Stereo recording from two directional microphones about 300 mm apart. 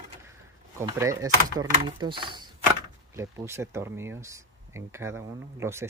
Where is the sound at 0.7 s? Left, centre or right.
Centre.